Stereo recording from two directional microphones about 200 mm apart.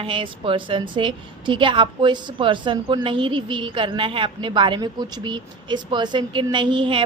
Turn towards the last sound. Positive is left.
turn(degrees=-25)  # may be behind; listen again after turning